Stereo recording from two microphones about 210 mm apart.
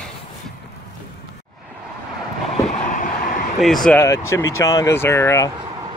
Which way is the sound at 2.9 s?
40° left (ahead or behind).